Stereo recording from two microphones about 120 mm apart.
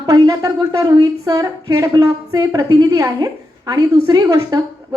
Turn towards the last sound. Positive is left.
turn(degrees=-30)  # may be behind; listen again after turning